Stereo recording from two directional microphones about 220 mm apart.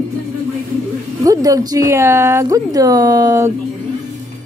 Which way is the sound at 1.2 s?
15° right (ahead or behind).